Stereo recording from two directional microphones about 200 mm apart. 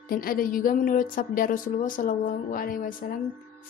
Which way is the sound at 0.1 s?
45° left (ahead or behind).